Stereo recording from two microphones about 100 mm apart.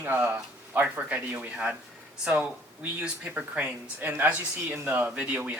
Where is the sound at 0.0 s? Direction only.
20° right (ahead or behind).